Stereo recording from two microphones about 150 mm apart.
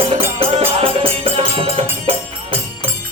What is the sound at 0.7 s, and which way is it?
Music, 40° right (ahead or behind).